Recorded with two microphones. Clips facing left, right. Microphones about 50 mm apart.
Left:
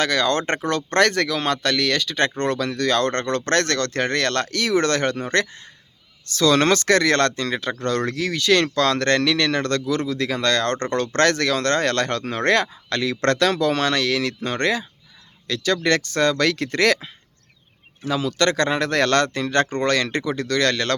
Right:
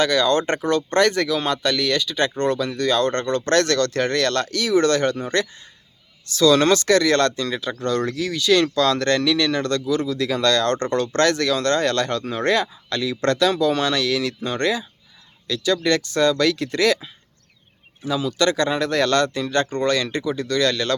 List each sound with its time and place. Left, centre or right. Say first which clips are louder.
0.0 s speech: right 2 dB; left